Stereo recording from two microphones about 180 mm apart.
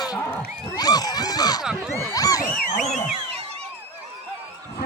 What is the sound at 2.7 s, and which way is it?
Speech, 40° left (ahead or behind).